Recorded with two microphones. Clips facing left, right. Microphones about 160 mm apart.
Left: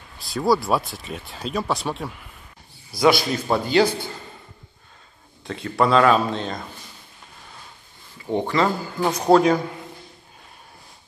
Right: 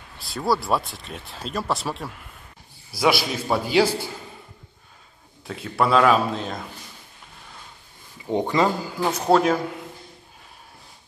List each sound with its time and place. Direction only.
0.2 s speech: centre (ahead or behind)
5.4 s speech: 5° right (ahead or behind)
8.3 s speech: 15° right (ahead or behind)
9.3 s speech: centre (ahead or behind)